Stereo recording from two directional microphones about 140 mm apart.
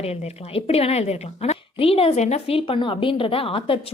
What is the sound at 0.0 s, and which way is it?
A woman's voice, 50° left (ahead or behind).